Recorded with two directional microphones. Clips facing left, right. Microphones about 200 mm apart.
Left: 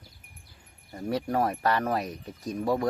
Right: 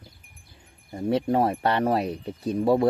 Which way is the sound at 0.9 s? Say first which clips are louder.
Right 5 dB; 25° right (ahead or behind).